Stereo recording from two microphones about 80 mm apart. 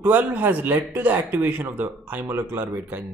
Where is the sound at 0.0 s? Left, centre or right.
Right.